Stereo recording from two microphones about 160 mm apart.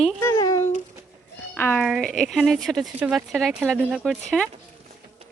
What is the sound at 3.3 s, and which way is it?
Speech, centre (ahead or behind).